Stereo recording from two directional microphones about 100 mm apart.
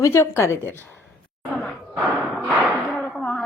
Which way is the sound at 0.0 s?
25° left (ahead or behind).